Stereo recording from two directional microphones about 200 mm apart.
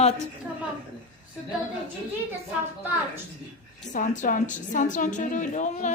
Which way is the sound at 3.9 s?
40° left (ahead or behind).